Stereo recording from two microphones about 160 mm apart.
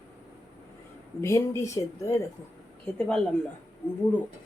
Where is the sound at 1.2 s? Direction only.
20° left (ahead or behind).